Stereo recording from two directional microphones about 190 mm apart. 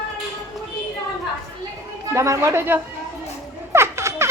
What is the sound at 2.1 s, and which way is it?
Speech, 15° right (ahead or behind).